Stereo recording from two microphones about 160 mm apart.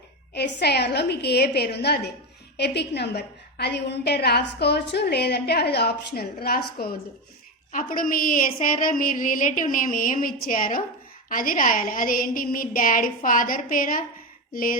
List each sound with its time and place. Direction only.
0.3 s a woman's voice: 90° left; by 7.0 s 70° left (ahead or behind)
7.7 s a woman's voice: 60° left (ahead or behind)